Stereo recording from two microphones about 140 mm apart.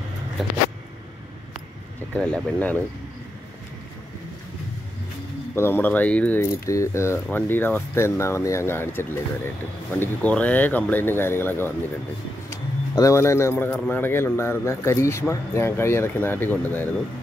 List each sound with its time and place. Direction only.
2.1 s speech: 5° left (ahead or behind)
5.6 s speech: 15° left (ahead or behind)
12.4 s bird: 20° left (ahead or behind)
13.8 s speech: 15° left (ahead or behind)